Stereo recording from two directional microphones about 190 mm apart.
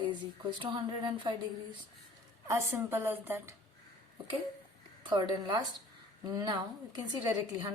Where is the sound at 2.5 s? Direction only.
15° right (ahead or behind).